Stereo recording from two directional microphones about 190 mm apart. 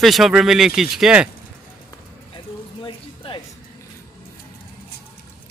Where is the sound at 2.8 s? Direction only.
25° left (ahead or behind).